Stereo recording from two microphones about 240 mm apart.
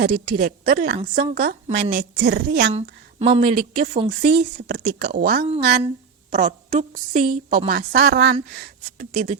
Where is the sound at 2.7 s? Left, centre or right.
Right.